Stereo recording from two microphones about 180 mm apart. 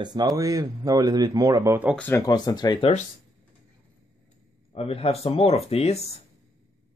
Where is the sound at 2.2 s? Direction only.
20° left (ahead or behind).